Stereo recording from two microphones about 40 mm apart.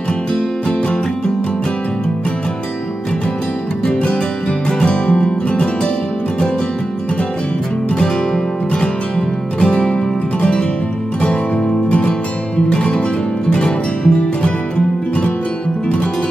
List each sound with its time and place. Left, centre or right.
4.6 s music: left
9.6 s music: left
11.9 s music: left